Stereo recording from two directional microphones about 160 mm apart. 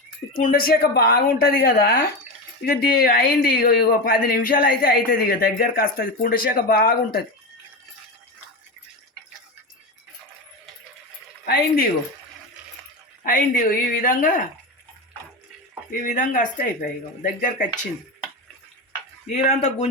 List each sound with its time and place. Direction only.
0.4 s speech: 65° left (ahead or behind)
11.4 s speech: 70° left (ahead or behind)
13.2 s speech: 60° left (ahead or behind)
15.9 s speech: 55° left (ahead or behind)
19.5 s speech: 40° left (ahead or behind)